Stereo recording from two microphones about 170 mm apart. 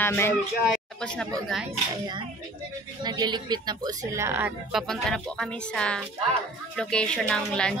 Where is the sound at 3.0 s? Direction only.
25° right (ahead or behind); by 4.8 s 10° right (ahead or behind).